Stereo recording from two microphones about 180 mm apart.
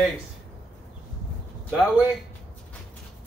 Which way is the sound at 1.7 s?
5° right (ahead or behind).